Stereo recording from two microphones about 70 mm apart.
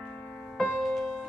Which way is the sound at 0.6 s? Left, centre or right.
Centre.